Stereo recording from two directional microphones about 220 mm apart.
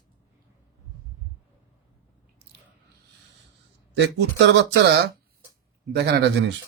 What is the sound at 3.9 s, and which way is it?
Speech, 55° right (ahead or behind).